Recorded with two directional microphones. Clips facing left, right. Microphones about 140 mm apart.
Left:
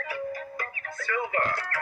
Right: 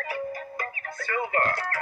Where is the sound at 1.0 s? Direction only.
45° right (ahead or behind).